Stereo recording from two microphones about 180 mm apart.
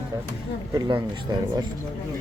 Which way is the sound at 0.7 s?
25° right (ahead or behind).